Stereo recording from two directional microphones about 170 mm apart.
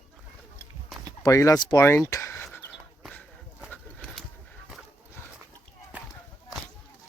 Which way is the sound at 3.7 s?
5° left (ahead or behind).